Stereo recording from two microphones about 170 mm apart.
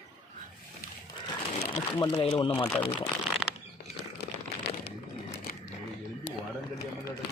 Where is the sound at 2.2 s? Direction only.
35° left (ahead or behind).